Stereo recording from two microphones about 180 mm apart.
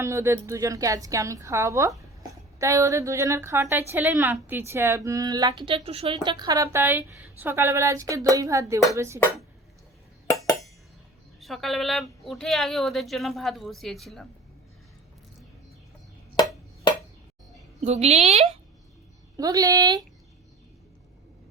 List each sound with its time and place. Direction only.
0.0 s a woman's voice: 15° right (ahead or behind); by 6.1 s 30° right (ahead or behind)
6.2 s a woman's voice: 20° right (ahead or behind)
11.3 s a woman's voice: centre (ahead or behind)
16.3 s chop: 25° left (ahead or behind)
17.7 s a woman's voice: 35° right (ahead or behind)
19.4 s speech: 20° right (ahead or behind)